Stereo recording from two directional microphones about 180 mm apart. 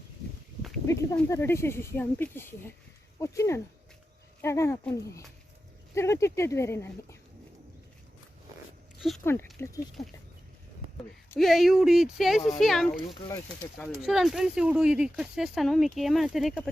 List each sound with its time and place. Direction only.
1.3 s speech: 15° left (ahead or behind)
9.0 s speech: centre (ahead or behind)
9.2 s speech: 15° left (ahead or behind)
11.3 s speech: centre (ahead or behind)